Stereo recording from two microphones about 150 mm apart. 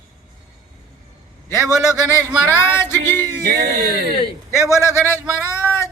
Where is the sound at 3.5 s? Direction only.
90° right.